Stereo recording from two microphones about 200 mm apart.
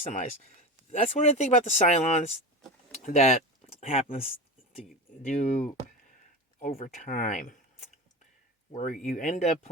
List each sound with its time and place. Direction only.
0.0 s speech: 40° left (ahead or behind)